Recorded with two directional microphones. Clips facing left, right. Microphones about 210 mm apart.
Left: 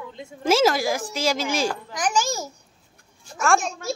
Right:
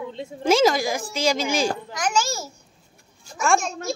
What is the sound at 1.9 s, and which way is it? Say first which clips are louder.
Babbling: even; 15° left (ahead or behind).